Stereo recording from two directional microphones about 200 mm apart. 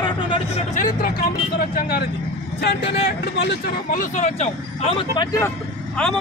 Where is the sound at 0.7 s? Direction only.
40° left (ahead or behind).